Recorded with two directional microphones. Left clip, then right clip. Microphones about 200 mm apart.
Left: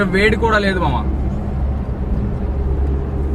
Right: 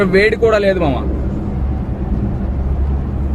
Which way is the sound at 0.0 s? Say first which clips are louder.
Right 3 dB; 20° right (ahead or behind).